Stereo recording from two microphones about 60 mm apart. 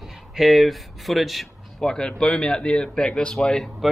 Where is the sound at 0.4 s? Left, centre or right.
Centre.